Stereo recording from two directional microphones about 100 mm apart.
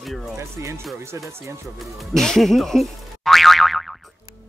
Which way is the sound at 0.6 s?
30° right (ahead or behind).